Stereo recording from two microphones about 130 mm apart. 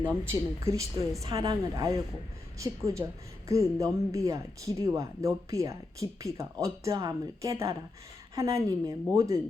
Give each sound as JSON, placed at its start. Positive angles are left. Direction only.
{"t": 0.1, "sound": "speech", "side_deg": -20}